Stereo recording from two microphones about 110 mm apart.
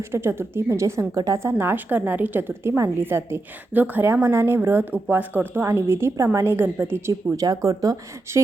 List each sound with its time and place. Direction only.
0.1 s a woman's voice: 20° right (ahead or behind)